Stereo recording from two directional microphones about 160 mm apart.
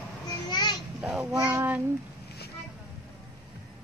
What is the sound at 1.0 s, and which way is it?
Babbling, 5° right (ahead or behind).